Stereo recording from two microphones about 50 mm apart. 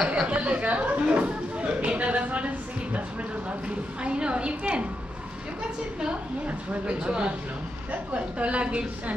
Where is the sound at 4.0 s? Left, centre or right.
Right.